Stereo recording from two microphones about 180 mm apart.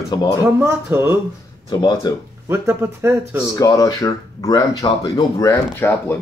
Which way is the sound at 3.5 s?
20° left (ahead or behind).